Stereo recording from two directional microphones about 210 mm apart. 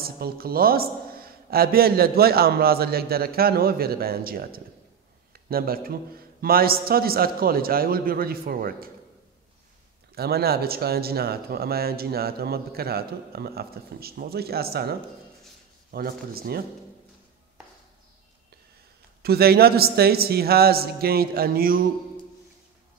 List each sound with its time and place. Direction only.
0.0 s speech: 45° right (ahead or behind)
10.1 s speech: 50° right (ahead or behind)
19.2 s speech: 50° right (ahead or behind)